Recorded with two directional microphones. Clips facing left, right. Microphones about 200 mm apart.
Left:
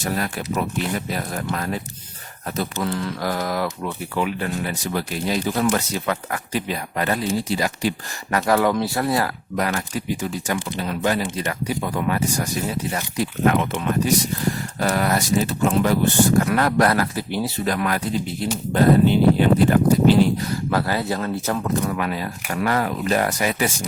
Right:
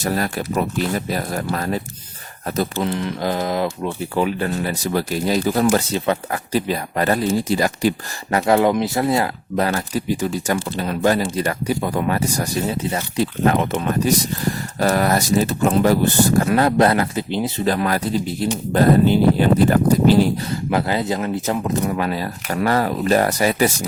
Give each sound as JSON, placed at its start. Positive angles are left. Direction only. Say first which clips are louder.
{"t": 0.0, "sound": "speech", "louder": "right 3 dB", "side_deg": -40}
{"t": 2.8, "sound": "speech", "louder": "right 3 dB", "side_deg": -20}
{"t": 8.3, "sound": "speech", "louder": "right 3 dB", "side_deg": -25}
{"t": 16.4, "sound": "speech", "louder": "right 3 dB", "side_deg": -25}
{"t": 20.5, "sound": "speech", "louder": "right 2 dB", "side_deg": -20}